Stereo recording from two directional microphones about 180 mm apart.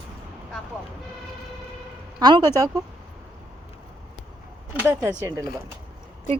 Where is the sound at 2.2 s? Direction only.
25° right (ahead or behind).